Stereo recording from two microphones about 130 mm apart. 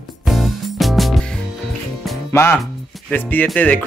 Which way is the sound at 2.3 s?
20° left (ahead or behind).